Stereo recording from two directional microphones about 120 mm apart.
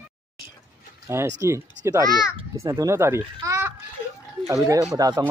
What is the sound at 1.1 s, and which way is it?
Speech, 20° right (ahead or behind).